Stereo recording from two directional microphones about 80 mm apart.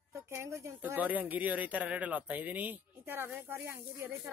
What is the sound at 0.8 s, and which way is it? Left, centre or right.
Speech, right.